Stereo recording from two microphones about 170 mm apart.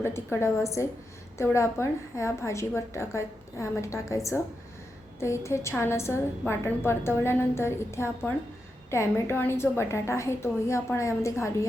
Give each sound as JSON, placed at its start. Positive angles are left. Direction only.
{"t": 0.0, "sound": "a woman's voice", "side_deg": 15}